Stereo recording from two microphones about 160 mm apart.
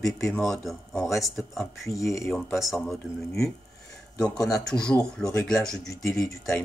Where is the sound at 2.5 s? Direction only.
Centre (ahead or behind).